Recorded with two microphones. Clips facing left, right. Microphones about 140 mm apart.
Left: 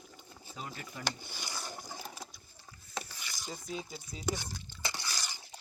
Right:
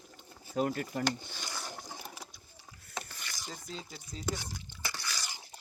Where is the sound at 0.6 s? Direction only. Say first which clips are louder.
Right 13 dB; 55° right (ahead or behind).